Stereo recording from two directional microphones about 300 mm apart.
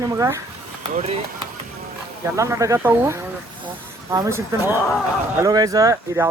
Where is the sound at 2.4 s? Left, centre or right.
Centre.